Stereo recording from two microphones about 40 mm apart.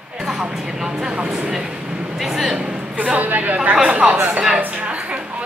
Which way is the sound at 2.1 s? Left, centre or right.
Centre.